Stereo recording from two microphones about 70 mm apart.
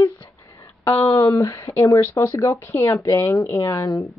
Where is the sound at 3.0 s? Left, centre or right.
Left.